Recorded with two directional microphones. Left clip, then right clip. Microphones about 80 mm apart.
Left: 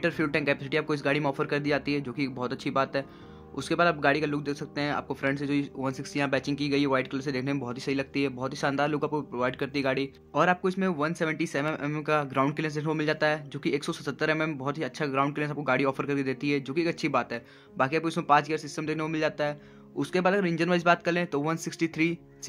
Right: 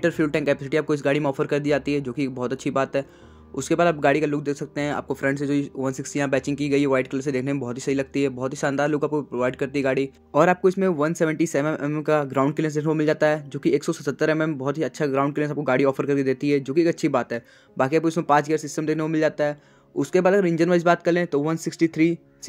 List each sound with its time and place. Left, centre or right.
0.0 s speech: right
10.3 s speech: right
11.6 s speech: right